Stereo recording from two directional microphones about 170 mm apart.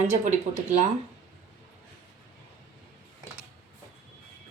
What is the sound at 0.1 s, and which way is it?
Speech, 50° right (ahead or behind).